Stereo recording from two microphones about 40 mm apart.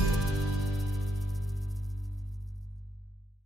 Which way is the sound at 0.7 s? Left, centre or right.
Centre.